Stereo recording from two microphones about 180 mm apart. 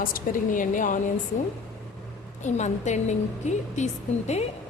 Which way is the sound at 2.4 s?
40° left (ahead or behind).